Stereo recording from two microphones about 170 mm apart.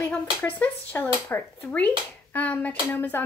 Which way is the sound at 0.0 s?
10° left (ahead or behind).